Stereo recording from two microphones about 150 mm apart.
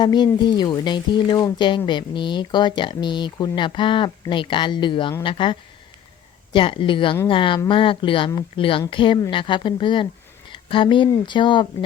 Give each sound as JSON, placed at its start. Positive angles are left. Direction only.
{"t": 0.0, "sound": "speech", "side_deg": 30}